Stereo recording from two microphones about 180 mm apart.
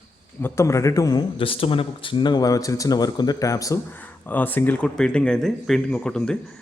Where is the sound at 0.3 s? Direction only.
15° left (ahead or behind).